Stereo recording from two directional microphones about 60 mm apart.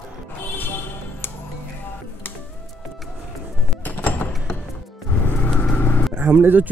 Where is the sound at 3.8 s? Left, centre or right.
Left.